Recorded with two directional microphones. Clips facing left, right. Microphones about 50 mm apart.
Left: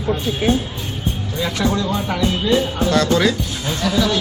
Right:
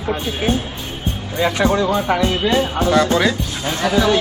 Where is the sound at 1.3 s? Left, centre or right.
Right.